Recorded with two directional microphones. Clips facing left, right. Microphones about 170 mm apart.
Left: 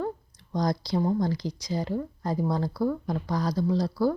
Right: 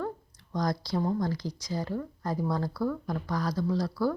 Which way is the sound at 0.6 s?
15° left (ahead or behind).